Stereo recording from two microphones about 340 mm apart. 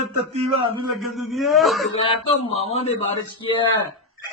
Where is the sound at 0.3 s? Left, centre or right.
Centre.